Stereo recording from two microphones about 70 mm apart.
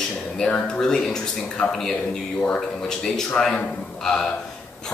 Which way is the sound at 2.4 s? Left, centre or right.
Centre.